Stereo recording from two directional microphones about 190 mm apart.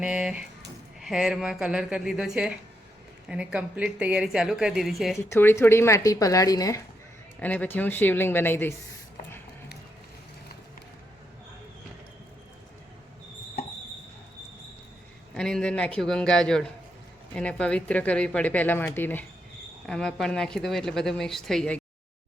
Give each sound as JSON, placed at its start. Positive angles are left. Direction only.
{"t": 0.0, "sound": "a woman's voice", "side_deg": -5}
{"t": 5.1, "sound": "speech", "side_deg": 10}
{"t": 15.4, "sound": "a woman's voice", "side_deg": 5}